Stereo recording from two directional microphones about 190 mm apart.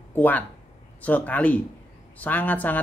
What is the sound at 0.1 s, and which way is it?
A woman's voice, 10° left (ahead or behind).